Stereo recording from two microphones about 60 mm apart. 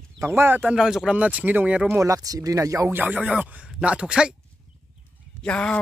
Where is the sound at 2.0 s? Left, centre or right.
Right.